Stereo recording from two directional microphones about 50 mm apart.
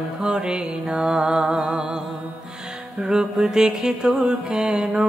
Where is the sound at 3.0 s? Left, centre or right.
Centre.